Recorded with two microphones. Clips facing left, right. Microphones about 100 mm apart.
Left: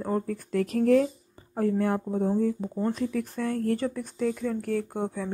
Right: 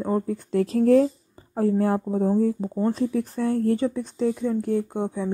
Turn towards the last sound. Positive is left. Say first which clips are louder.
# right 4 dB
turn(degrees=-20)  # may be behind; listen again after turning